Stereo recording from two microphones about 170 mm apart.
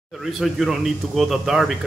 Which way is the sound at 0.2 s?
Centre (ahead or behind).